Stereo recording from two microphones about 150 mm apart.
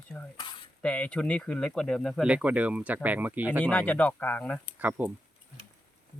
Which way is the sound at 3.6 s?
10° left (ahead or behind).